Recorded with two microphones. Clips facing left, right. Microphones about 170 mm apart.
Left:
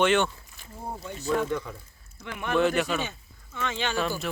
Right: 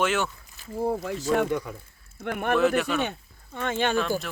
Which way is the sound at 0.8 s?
90° right.